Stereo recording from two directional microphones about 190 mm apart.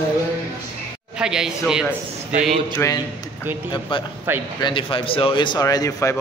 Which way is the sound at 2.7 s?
15° left (ahead or behind).